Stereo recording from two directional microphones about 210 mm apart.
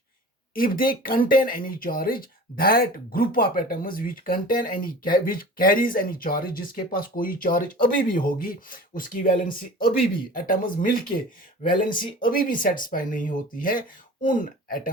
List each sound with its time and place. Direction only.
0.5 s speech: 40° left (ahead or behind)